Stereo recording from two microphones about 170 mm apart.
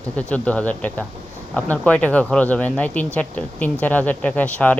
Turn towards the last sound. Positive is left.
turn(degrees=10)  # may be behind; listen again after turning